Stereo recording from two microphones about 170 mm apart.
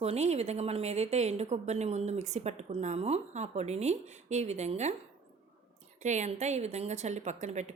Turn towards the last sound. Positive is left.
turn(degrees=-45)  # may be behind; listen again after turning